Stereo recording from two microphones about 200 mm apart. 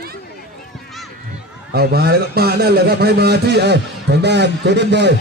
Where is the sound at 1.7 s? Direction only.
50° right (ahead or behind).